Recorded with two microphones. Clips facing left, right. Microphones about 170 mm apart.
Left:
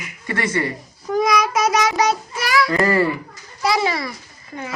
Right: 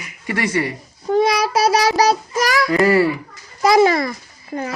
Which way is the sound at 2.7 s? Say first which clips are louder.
Right 5 dB; 5° right (ahead or behind).